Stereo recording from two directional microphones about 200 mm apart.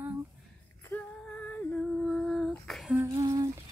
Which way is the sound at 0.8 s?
5° left (ahead or behind).